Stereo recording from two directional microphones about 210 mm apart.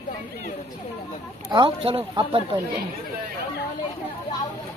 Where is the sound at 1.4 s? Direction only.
20° right (ahead or behind).